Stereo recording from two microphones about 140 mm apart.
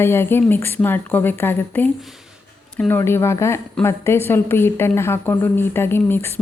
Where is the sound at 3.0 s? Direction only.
20° left (ahead or behind).